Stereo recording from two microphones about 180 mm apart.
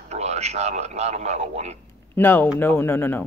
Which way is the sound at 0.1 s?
35° right (ahead or behind).